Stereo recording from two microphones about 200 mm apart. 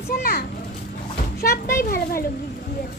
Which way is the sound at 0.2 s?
50° left (ahead or behind).